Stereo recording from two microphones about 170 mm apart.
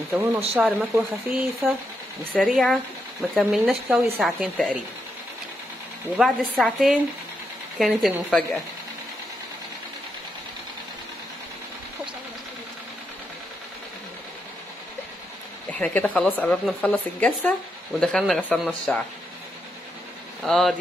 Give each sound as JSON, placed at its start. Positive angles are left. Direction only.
{"t": 0.1, "sound": "speech", "side_deg": -10}
{"t": 6.1, "sound": "speech", "side_deg": 0}
{"t": 15.8, "sound": "speech", "side_deg": 10}
{"t": 20.4, "sound": "speech", "side_deg": 0}